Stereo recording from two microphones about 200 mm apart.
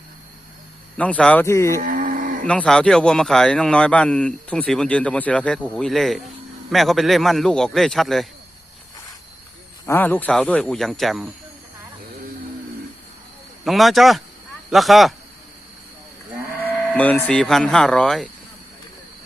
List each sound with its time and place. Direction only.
0.9 s speech: 5° left (ahead or behind)
1.8 s cattle: 45° right (ahead or behind)
2.5 s a man's voice: 5° left (ahead or behind)
9.8 s a man's voice: 10° left (ahead or behind)
13.7 s a man's voice: centre (ahead or behind)
16.9 s a man's voice: 10° left (ahead or behind)